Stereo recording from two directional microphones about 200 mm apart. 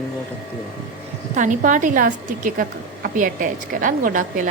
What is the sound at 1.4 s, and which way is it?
A woman's voice, 40° right (ahead or behind).